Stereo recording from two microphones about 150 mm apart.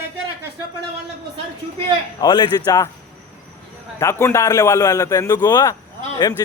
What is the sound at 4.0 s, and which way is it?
A man's voice, 15° left (ahead or behind).